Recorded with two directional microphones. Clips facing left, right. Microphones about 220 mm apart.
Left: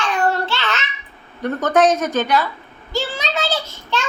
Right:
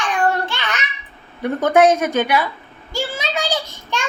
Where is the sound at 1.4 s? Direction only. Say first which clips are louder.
Right 2 dB; 10° right (ahead or behind).